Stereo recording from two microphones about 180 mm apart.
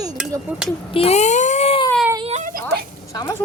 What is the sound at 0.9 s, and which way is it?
Speech, 35° left (ahead or behind).